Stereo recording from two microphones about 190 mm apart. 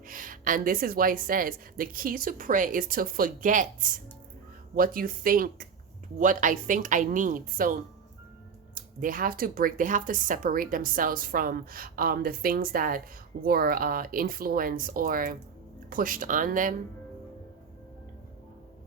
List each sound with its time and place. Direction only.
0.1 s speech: 45° right (ahead or behind)